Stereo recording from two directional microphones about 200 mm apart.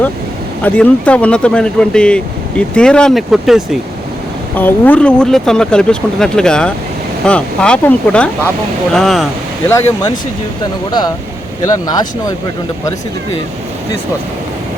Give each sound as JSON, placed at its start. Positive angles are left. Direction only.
{"t": 0.6, "sound": "speech", "side_deg": 5}
{"t": 4.5, "sound": "speech", "side_deg": 10}
{"t": 9.6, "sound": "speech", "side_deg": 15}